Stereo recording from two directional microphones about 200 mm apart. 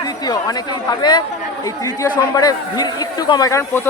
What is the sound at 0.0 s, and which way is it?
Speech, 20° left (ahead or behind).